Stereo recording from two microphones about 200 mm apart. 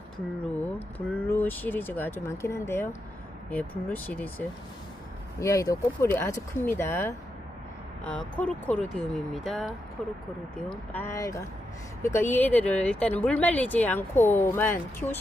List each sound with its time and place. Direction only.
0.9 s speech: 10° left (ahead or behind)